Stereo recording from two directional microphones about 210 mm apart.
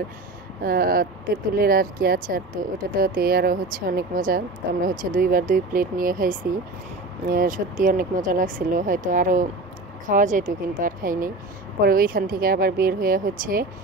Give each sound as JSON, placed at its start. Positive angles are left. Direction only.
{"t": 0.6, "sound": "speech", "side_deg": -45}